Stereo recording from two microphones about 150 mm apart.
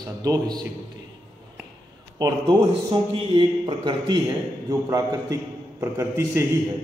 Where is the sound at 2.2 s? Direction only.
25° right (ahead or behind).